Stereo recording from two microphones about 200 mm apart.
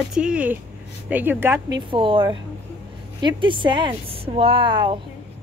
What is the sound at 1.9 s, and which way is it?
A woman's voice, 25° right (ahead or behind).